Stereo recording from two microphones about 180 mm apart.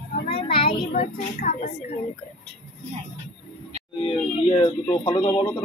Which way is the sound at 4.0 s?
30° left (ahead or behind).